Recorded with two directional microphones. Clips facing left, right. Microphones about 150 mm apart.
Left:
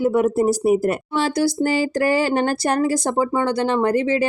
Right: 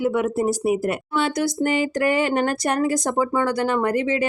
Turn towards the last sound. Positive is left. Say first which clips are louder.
# left 3 dB
turn(degrees=30)  # may be behind; listen again after turning